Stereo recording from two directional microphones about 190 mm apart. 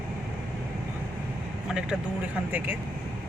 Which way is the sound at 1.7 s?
5° right (ahead or behind).